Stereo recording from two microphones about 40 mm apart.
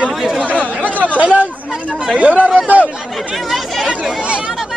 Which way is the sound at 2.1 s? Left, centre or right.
Right.